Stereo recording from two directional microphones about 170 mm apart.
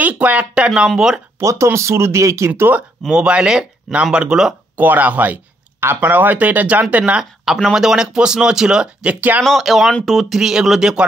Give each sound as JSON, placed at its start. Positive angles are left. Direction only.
{"t": 0.0, "sound": "speech", "side_deg": -10}
{"t": 1.4, "sound": "speech", "side_deg": -15}